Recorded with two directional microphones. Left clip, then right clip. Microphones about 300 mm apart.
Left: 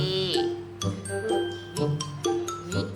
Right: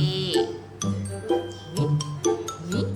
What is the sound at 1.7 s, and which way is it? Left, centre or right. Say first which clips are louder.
Music: right 2 dB; centre.